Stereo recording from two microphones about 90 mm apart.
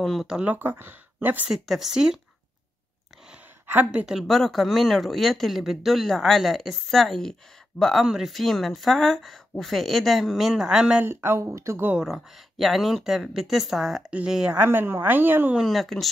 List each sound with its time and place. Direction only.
0.0 s speech: centre (ahead or behind)
0.4 s speech: 20° right (ahead or behind)
1.5 s speech: 5° right (ahead or behind)
3.6 s a woman's voice: 20° right (ahead or behind)
4.0 s speech: 5° right (ahead or behind)
11.1 s speech: 25° right (ahead or behind)
11.9 s speech: 5° right (ahead or behind)
14.7 s speech: 25° right (ahead or behind)
15.5 s speech: centre (ahead or behind)